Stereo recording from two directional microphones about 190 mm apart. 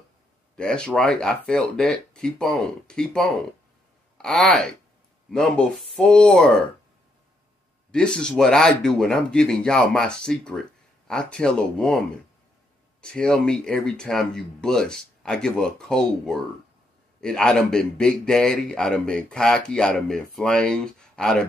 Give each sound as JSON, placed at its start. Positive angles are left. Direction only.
{"t": 0.6, "sound": "a man's voice", "side_deg": 5}
{"t": 7.9, "sound": "a man's voice", "side_deg": 5}
{"t": 13.0, "sound": "a man's voice", "side_deg": 5}